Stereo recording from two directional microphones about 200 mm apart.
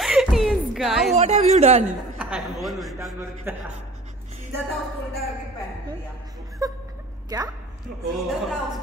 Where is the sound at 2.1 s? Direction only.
5° right (ahead or behind).